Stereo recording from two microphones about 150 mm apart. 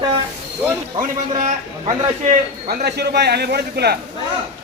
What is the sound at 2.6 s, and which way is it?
A man's voice, 90° right.